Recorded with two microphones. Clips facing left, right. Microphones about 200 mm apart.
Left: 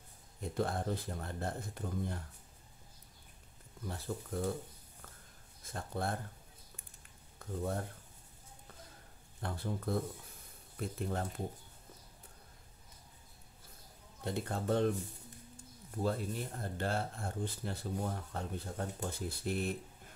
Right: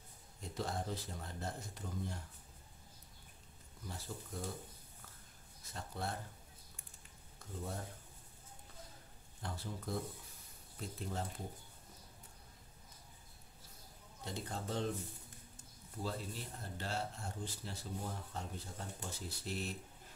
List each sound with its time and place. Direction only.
0.4 s speech: 55° left (ahead or behind)
3.8 s speech: 60° left (ahead or behind)
5.6 s speech: 50° left (ahead or behind)
7.3 s speech: 60° left (ahead or behind)
9.4 s speech: 55° left (ahead or behind)
14.2 s speech: 55° left (ahead or behind)
16.0 s speech: 55° left (ahead or behind)